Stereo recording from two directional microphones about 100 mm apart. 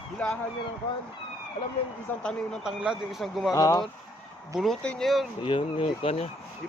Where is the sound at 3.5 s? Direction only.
35° left (ahead or behind).